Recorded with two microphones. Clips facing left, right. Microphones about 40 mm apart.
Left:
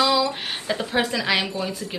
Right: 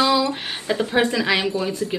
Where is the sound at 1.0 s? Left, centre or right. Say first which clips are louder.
Right 2 dB; centre.